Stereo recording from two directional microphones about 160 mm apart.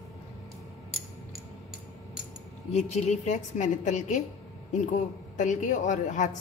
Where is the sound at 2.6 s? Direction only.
45° left (ahead or behind).